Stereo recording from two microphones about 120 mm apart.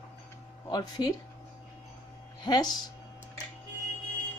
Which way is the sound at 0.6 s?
35° left (ahead or behind).